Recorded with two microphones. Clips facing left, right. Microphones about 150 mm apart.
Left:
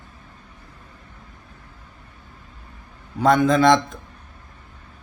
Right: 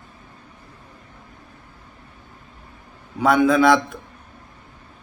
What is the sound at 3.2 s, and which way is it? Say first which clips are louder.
Speech: even; 10° right (ahead or behind).